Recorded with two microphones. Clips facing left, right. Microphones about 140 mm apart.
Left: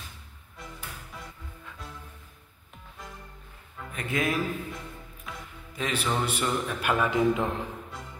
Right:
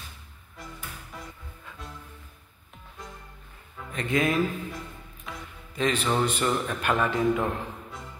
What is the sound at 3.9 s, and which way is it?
Speech, 5° left (ahead or behind).